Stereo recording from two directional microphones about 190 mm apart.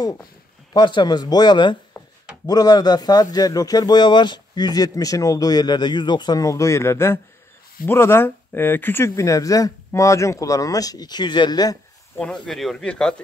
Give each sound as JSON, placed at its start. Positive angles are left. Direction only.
{"t": 0.0, "sound": "speech", "side_deg": 20}
{"t": 12.2, "sound": "speech", "side_deg": 5}